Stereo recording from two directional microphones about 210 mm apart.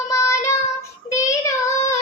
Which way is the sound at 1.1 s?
15° left (ahead or behind).